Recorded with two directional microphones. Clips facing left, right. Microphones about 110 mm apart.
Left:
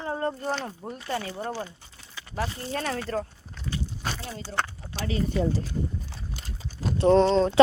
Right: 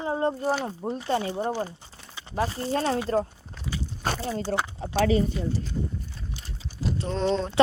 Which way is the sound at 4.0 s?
45° right (ahead or behind).